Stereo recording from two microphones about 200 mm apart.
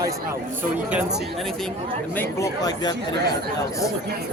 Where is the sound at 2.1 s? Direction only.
10° left (ahead or behind).